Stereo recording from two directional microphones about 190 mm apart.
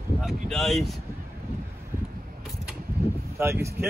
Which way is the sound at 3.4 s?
15° right (ahead or behind).